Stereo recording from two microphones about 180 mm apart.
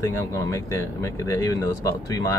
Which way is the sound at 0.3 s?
15° left (ahead or behind).